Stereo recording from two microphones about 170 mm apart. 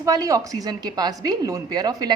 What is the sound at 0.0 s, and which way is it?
A woman's voice, 20° right (ahead or behind).